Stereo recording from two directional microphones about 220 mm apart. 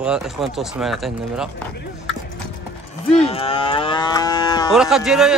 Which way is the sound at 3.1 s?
25° left (ahead or behind).